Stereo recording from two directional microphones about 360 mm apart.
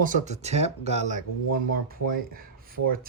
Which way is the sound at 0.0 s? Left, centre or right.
Centre.